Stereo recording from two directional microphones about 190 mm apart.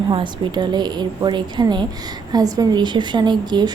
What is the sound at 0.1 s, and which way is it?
A woman's voice, 25° right (ahead or behind).